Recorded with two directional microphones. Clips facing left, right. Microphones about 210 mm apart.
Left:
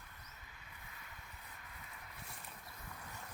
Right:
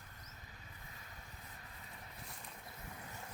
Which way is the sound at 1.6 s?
35° right (ahead or behind).